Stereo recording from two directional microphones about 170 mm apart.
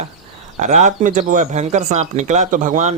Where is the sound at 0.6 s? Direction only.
45° right (ahead or behind).